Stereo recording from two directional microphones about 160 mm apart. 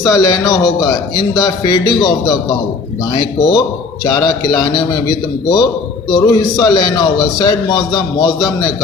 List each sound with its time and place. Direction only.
0.0 s a man's voice: 20° left (ahead or behind)